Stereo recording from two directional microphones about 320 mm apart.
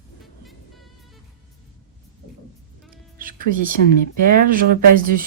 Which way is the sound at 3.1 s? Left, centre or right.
Right.